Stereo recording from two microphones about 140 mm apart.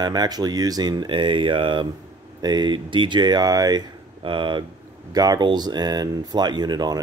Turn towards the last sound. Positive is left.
turn(degrees=-30)  # may be behind; listen again after turning